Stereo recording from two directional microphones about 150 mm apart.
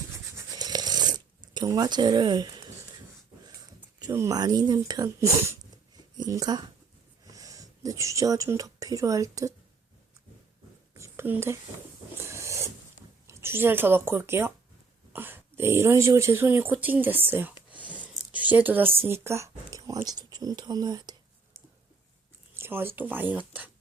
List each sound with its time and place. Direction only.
0.3 s scratch: 25° right (ahead or behind)
1.5 s speech: 25° right (ahead or behind)
4.0 s speech: 20° right (ahead or behind)
10.9 s a sound: 15° right (ahead or behind)
12.3 s filing: 20° right (ahead or behind)
13.2 s speech: 15° right (ahead or behind)
17.7 s a sound: 10° right (ahead or behind)
20.1 s speech: 25° right (ahead or behind)
22.5 s speech: 15° right (ahead or behind)